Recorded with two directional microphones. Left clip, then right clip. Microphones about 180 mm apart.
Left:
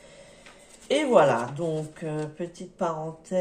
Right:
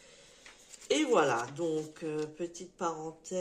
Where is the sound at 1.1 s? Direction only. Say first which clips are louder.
Left 10 dB; 40° right (ahead or behind).